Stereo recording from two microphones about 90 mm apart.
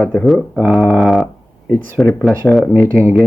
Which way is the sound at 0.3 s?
Centre (ahead or behind).